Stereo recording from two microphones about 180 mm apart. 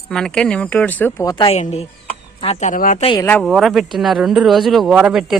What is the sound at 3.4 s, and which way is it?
Speech, centre (ahead or behind).